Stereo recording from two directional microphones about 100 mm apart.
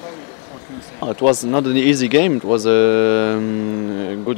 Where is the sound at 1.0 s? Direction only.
10° right (ahead or behind).